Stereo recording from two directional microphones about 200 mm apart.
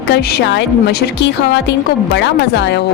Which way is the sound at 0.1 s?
50° left (ahead or behind).